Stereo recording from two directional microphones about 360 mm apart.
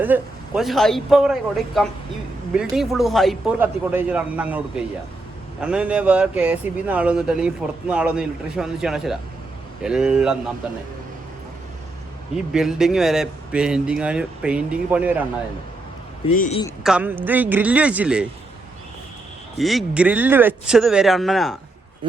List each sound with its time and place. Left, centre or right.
0.0 s speech: centre
12.5 s speech: centre
16.3 s a man's voice: centre
16.8 s speech: centre
19.5 s speech: centre